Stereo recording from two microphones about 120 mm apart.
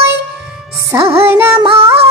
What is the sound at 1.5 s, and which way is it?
Music, 50° right (ahead or behind).